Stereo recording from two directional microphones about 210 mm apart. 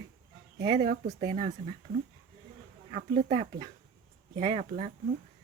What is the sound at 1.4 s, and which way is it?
Speech, 35° right (ahead or behind).